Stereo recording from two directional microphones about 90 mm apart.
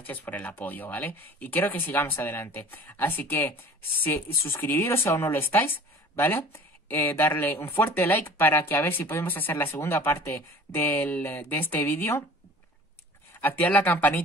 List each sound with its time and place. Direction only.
0.0 s speech: 20° left (ahead or behind)
13.4 s speech: 20° left (ahead or behind)